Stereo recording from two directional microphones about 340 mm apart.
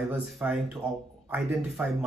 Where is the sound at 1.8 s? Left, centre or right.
Centre.